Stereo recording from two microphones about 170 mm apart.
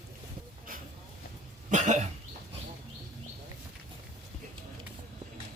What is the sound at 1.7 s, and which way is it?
Cough, 45° right (ahead or behind).